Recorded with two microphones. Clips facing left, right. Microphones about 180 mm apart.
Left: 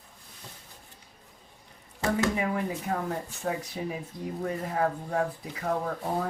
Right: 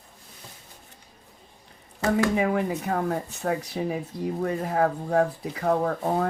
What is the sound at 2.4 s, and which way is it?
Speech, 65° right (ahead or behind).